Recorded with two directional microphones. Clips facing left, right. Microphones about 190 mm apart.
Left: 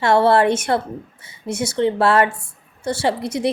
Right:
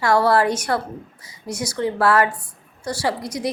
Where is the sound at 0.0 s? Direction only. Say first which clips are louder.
Left 3 dB; 25° left (ahead or behind).